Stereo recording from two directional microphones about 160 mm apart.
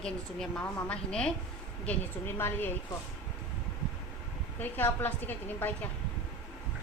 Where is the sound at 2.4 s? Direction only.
15° left (ahead or behind).